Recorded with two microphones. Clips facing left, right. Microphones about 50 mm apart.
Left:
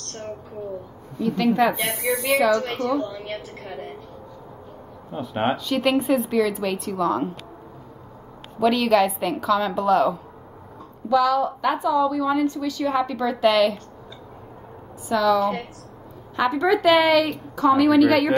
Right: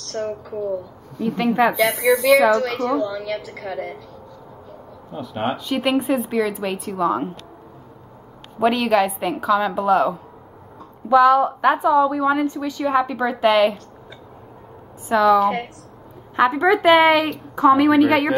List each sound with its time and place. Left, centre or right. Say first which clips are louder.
0.1 s a woman's voice: right 8 dB; right
1.2 s a woman's voice: right 1 dB; right
1.9 s a woman's voice: right 7 dB; right
5.1 s speech: left 1 dB; left
5.6 s speech: right 1 dB; centre
8.7 s speech: even; centre
11.1 s a woman's voice: right 6 dB; right
15.0 s a woman's voice: right 4 dB; right